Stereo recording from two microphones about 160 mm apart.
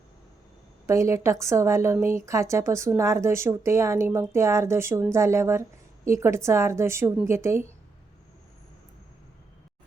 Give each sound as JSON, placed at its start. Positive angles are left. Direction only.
{"t": 0.9, "sound": "a woman's voice", "side_deg": -20}